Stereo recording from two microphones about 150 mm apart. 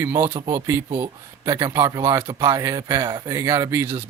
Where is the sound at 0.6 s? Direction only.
15° right (ahead or behind).